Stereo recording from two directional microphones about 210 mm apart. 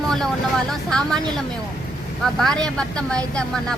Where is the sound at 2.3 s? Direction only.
Centre (ahead or behind).